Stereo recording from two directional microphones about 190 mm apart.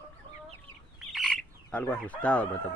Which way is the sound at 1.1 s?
Centre (ahead or behind).